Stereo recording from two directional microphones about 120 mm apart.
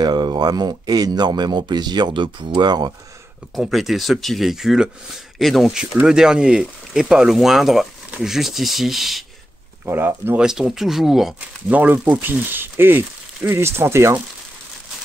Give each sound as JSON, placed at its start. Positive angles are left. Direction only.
{"t": 0.0, "sound": "speech", "side_deg": -35}
{"t": 3.5, "sound": "speech", "side_deg": 0}
{"t": 9.8, "sound": "speech", "side_deg": -20}
{"t": 10.4, "sound": "speech", "side_deg": -5}
{"t": 11.7, "sound": "speech", "side_deg": -15}